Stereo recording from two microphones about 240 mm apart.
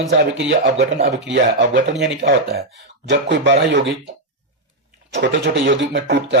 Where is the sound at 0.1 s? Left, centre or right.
Right.